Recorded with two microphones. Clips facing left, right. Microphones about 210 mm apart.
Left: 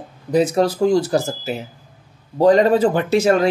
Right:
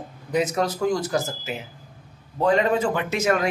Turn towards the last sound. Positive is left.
turn(degrees=30)  # may be behind; listen again after turning